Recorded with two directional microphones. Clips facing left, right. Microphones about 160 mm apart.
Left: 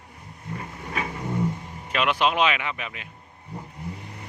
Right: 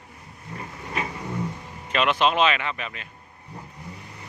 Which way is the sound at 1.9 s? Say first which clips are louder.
Right 1 dB; 10° left (ahead or behind).